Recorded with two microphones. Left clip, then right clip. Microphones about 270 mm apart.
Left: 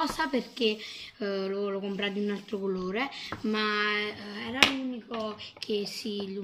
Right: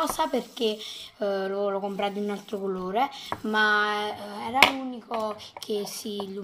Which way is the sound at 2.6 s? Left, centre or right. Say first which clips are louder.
Right 1 dB; right.